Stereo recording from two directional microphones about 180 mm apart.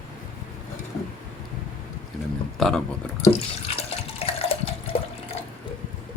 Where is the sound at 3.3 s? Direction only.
35° left (ahead or behind).